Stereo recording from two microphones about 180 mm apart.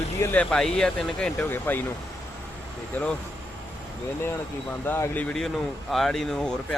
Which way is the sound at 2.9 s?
5° left (ahead or behind).